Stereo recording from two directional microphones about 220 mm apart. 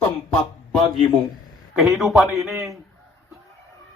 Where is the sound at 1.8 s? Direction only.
Centre (ahead or behind).